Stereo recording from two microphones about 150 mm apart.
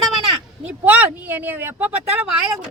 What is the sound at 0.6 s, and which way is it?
Speech, 10° right (ahead or behind).